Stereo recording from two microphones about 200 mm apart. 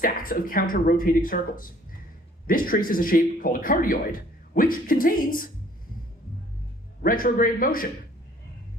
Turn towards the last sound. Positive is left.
turn(degrees=45)  # may be behind; listen again after turning